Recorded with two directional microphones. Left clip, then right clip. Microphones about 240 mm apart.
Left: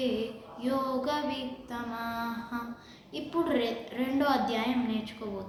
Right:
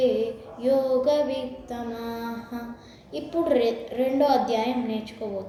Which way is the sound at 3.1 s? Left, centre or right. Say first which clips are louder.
Right 6 dB; centre.